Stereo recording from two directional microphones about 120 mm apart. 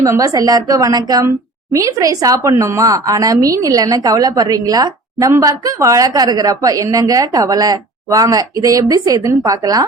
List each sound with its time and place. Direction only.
0.0 s a woman's voice: 30° right (ahead or behind)